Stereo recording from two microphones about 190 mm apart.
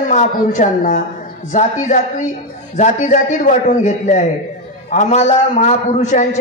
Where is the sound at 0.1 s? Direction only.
40° left (ahead or behind).